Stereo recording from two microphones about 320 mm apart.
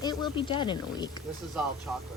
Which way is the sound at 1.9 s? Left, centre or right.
Centre.